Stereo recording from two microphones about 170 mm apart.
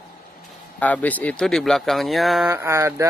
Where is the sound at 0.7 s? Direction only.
10° left (ahead or behind).